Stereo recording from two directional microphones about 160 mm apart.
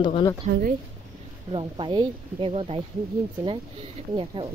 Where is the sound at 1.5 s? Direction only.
30° right (ahead or behind).